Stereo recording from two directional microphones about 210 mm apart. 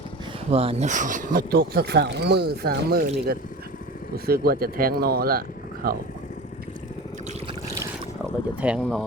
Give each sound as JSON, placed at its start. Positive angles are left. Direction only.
{"t": 0.5, "sound": "speech", "side_deg": -30}
{"t": 8.6, "sound": "speech", "side_deg": 0}